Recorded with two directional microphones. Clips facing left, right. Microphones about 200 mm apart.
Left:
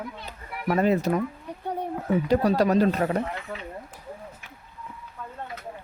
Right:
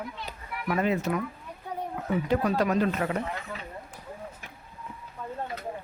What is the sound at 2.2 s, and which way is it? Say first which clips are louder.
Speech: left 4 dB; 35° left (ahead or behind).